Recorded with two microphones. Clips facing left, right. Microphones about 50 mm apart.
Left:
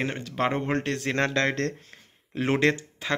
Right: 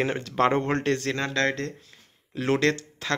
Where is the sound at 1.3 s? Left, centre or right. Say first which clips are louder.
Even; left.